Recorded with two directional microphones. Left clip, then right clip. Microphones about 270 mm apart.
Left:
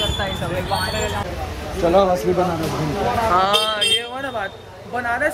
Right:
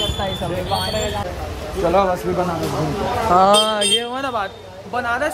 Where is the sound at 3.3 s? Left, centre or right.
Right.